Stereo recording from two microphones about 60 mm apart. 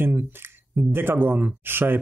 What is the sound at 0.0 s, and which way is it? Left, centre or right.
Speech, right.